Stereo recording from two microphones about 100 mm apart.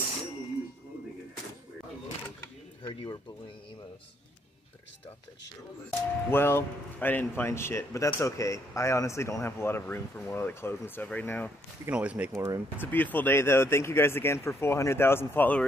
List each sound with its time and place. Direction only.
2.9 s speech: 55° left (ahead or behind)
5.9 s speech: 20° left (ahead or behind)
11.9 s speech: 15° right (ahead or behind)
12.4 s speech: 30° right (ahead or behind)
12.8 s speech: 20° left (ahead or behind)